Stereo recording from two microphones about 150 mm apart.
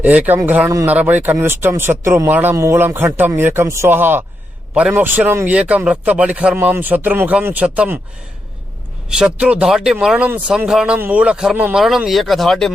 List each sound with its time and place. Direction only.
0.0 s speech: 10° right (ahead or behind)
9.0 s a man's voice: 5° right (ahead or behind)